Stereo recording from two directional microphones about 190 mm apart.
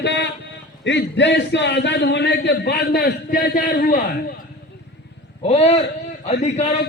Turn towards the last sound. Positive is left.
turn(degrees=35)  # may be behind; listen again after turning